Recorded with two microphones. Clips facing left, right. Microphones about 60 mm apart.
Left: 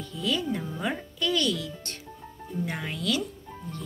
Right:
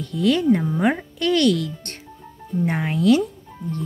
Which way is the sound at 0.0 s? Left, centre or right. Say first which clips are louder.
Right 10 dB; right.